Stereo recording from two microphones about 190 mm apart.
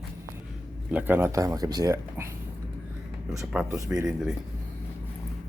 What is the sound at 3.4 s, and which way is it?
Speech, 5° right (ahead or behind).